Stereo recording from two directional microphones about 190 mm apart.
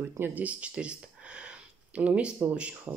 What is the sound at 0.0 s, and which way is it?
Speech, 10° right (ahead or behind).